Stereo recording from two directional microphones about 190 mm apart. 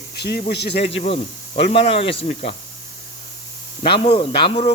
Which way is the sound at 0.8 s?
30° left (ahead or behind).